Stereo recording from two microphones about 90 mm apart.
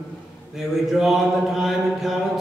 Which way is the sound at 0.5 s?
5° right (ahead or behind).